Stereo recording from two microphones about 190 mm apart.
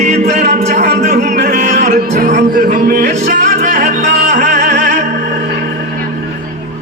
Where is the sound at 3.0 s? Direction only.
40° right (ahead or behind).